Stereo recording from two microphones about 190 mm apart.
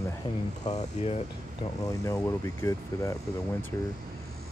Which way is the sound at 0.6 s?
35° left (ahead or behind).